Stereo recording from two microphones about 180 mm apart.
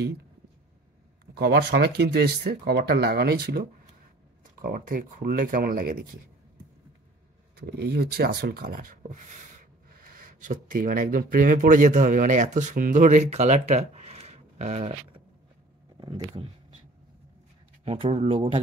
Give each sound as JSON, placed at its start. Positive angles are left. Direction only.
{"t": 1.2, "sound": "speech", "side_deg": -60}
{"t": 7.5, "sound": "rub", "side_deg": -65}
{"t": 16.0, "sound": "speech", "side_deg": -25}
{"t": 17.8, "sound": "speech", "side_deg": -30}